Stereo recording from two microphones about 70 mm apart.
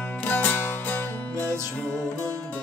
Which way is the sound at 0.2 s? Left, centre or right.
Left.